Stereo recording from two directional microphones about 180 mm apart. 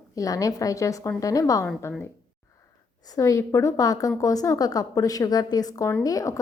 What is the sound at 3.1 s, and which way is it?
A woman's voice, 20° left (ahead or behind).